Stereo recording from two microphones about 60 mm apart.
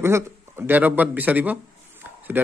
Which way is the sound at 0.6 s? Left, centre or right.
Right.